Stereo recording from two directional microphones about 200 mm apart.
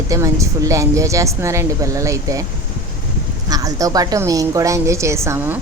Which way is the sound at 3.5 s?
15° right (ahead or behind).